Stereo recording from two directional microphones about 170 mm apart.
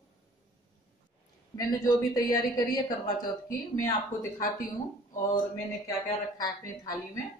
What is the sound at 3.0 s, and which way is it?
Speech, 55° left (ahead or behind).